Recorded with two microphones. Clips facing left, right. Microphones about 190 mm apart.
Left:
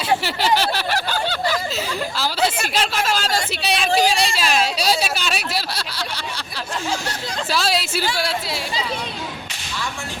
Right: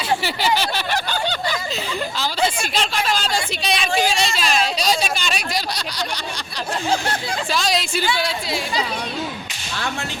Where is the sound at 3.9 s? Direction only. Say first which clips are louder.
Left 4 dB; 35° left (ahead or behind).